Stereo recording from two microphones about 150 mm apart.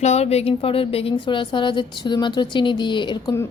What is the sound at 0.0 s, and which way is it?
A woman's voice, 45° left (ahead or behind).